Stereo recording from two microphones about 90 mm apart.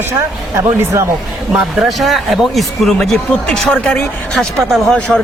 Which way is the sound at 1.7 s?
Centre (ahead or behind).